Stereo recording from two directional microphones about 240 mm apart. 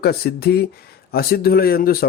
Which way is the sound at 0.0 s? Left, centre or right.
Left.